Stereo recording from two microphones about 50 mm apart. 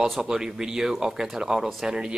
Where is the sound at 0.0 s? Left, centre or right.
Centre.